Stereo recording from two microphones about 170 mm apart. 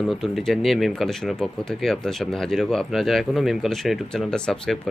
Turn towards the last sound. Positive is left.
turn(degrees=5)  # may be behind; listen again after turning